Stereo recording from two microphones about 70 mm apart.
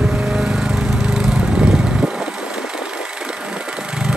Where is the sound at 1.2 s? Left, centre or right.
Centre.